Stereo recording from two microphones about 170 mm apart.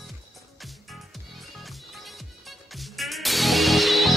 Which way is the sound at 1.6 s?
Centre (ahead or behind).